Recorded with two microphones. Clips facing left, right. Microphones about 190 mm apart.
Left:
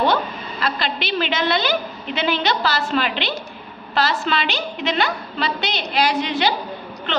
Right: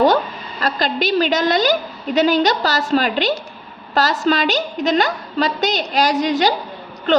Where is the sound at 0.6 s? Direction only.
40° right (ahead or behind).